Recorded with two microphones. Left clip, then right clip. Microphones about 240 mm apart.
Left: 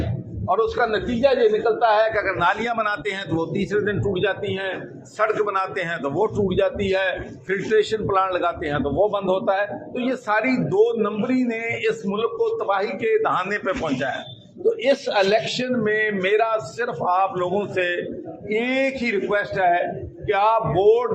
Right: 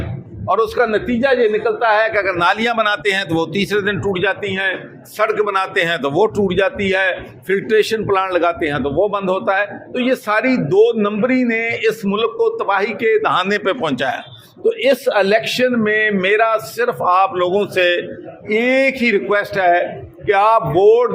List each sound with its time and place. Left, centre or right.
0.4 s a man's voice: right